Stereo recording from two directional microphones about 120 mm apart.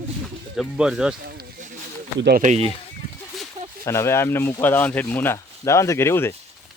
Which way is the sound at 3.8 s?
25° left (ahead or behind).